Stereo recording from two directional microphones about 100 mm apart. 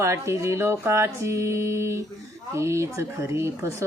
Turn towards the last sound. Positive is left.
turn(degrees=-25)  # may be behind; listen again after turning